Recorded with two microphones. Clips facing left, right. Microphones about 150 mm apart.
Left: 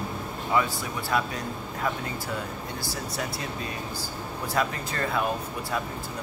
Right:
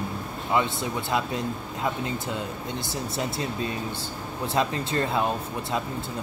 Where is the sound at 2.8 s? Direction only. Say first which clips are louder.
Right 3 dB; 25° right (ahead or behind).